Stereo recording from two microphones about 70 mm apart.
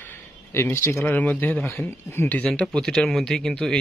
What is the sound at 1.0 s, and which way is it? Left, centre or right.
Speech, left.